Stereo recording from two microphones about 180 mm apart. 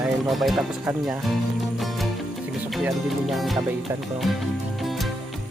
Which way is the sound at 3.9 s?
10° right (ahead or behind).